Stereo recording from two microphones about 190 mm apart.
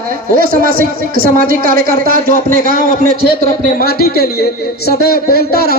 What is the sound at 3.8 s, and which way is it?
A man's voice, 55° left (ahead or behind).